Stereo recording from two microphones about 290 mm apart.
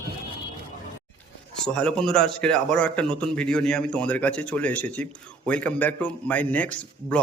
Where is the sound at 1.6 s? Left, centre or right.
Centre.